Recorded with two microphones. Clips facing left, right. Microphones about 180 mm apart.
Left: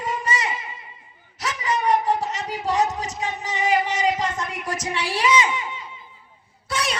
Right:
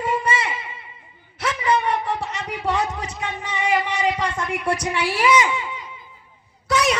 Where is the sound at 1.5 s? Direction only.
45° left (ahead or behind).